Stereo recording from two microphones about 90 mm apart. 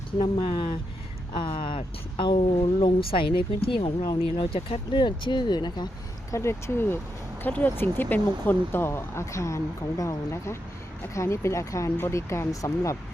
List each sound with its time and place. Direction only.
0.2 s speech: 60° left (ahead or behind)
4.0 s speech: 50° left (ahead or behind)
4.5 s speech: 75° left (ahead or behind); by 5.9 s 55° left (ahead or behind)
6.3 s speech: 30° left (ahead or behind)